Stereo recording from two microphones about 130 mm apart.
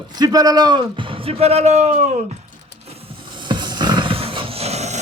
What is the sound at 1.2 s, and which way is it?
Speech, 50° right (ahead or behind).